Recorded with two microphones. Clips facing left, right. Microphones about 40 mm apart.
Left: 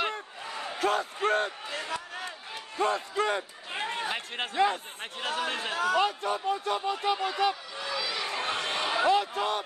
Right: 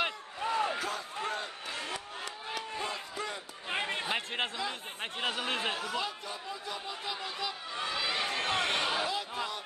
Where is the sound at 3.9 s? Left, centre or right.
Centre.